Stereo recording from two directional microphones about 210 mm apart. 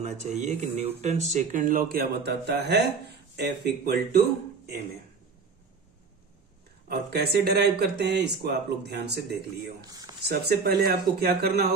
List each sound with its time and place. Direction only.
0.0 s speech: 35° right (ahead or behind); by 4.2 s 50° right (ahead or behind)
6.9 s speech: 50° right (ahead or behind)
9.8 s speech: 20° right (ahead or behind)
10.2 s speech: 50° right (ahead or behind)